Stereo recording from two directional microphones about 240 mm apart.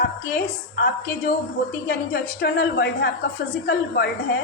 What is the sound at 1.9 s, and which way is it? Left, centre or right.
A woman's voice, left.